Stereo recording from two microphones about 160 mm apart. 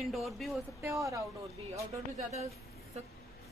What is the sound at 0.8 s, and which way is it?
Speech, 20° right (ahead or behind).